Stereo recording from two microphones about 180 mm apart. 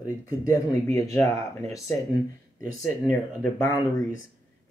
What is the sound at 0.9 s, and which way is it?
Speech, 15° left (ahead or behind).